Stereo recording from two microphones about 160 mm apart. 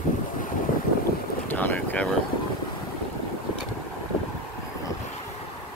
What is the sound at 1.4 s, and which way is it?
Boat, 10° left (ahead or behind).